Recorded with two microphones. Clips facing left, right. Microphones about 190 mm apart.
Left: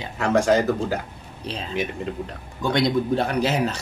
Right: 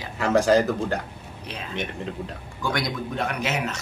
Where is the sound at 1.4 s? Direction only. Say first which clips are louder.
Left 5 dB; 30° left (ahead or behind).